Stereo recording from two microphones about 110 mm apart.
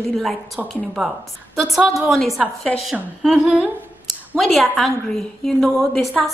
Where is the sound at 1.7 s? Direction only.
5° right (ahead or behind).